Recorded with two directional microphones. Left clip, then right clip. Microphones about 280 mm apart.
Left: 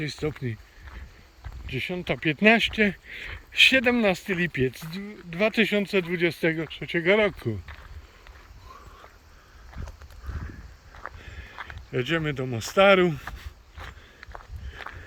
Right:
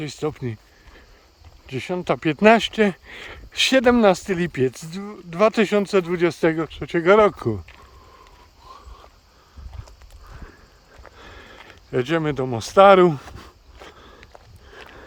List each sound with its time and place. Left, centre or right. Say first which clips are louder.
0.0 s speech: right 4 dB; centre
1.6 s speech: right 5 dB; centre
11.2 s a sound: left 1 dB; centre